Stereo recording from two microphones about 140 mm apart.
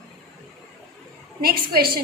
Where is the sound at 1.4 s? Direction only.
90° right.